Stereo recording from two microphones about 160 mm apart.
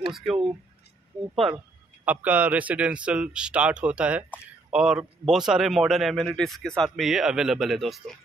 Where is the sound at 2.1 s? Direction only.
10° right (ahead or behind).